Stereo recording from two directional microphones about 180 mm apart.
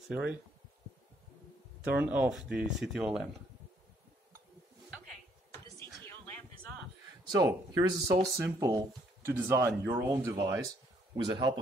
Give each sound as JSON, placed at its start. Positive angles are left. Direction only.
{"t": 0.1, "sound": "speech", "side_deg": -5}
{"t": 1.9, "sound": "speech", "side_deg": -10}
{"t": 6.0, "sound": "a sound", "side_deg": 10}
{"t": 7.2, "sound": "speech", "side_deg": -20}